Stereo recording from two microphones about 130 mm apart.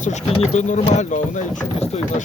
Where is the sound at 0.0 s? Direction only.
60° left (ahead or behind).